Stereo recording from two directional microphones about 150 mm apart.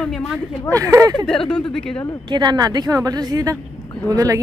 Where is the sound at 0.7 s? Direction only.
20° right (ahead or behind).